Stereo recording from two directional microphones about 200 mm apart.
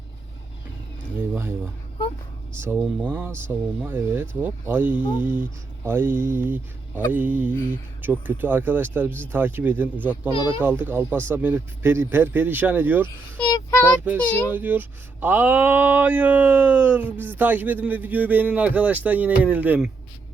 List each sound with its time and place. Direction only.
1.3 s a sound: 10° right (ahead or behind)
2.6 s speech: 10° right (ahead or behind)
13.4 s child singing: 20° left (ahead or behind)
14.4 s speech: 10° right (ahead or behind)